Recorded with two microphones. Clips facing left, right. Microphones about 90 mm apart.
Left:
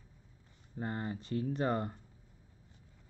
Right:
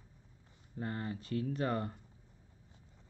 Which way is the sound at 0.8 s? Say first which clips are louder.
Left 1 dB; 25° left (ahead or behind).